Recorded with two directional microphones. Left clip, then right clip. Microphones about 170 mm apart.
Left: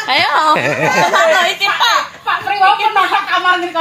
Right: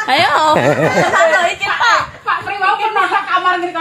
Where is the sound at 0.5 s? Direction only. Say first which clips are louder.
Right 1 dB; 35° right (ahead or behind).